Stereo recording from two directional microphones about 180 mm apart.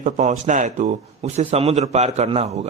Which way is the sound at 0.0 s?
45° right (ahead or behind).